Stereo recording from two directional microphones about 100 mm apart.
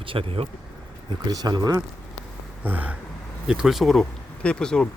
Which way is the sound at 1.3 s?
45° right (ahead or behind).